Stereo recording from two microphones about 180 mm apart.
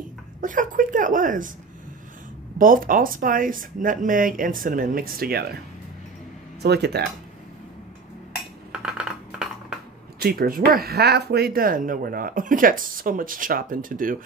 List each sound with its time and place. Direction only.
0.4 s speech: 45° right (ahead or behind)
2.6 s speech: 50° right (ahead or behind)
6.6 s speech: 65° right (ahead or behind)
8.8 s a sound: 5° right (ahead or behind)
10.1 s speech: 55° right (ahead or behind)